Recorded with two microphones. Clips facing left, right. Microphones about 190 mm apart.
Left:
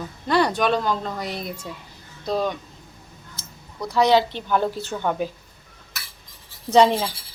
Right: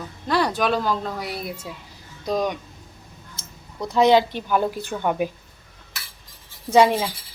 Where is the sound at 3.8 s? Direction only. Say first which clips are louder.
Right 2 dB; 15° right (ahead or behind).